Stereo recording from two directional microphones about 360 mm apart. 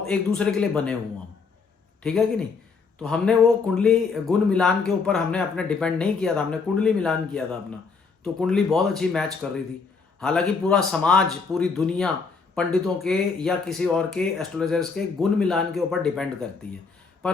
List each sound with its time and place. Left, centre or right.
0.0 s speech: centre
2.0 s speech: centre